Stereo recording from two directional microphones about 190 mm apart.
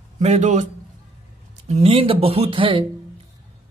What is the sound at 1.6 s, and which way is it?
Speech, 35° right (ahead or behind).